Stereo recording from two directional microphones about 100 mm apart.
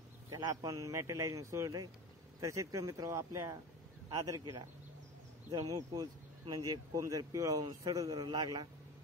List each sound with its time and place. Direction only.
0.5 s a man's voice: 35° right (ahead or behind)